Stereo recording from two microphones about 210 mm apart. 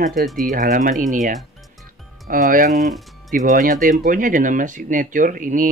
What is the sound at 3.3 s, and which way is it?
Speech, 40° right (ahead or behind).